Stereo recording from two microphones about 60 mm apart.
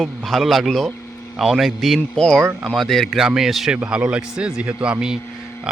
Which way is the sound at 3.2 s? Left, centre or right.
Centre.